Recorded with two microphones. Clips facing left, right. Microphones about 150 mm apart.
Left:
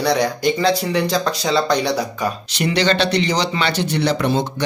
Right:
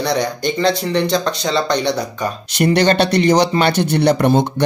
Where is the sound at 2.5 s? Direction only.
50° right (ahead or behind).